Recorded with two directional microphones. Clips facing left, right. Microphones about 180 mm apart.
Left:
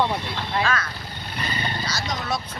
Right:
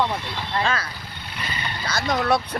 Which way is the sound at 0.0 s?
10° left (ahead or behind).